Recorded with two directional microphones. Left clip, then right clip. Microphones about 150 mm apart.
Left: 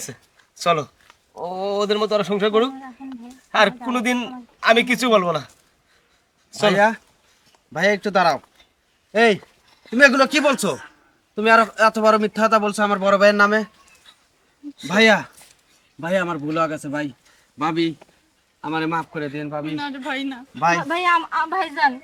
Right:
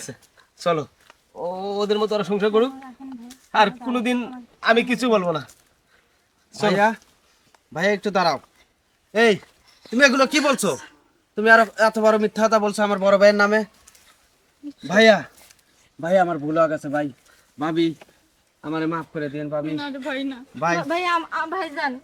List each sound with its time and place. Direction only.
0.0 s speech: 5° left (ahead or behind)
6.5 s speech: 5° left (ahead or behind)
14.8 s speech: centre (ahead or behind)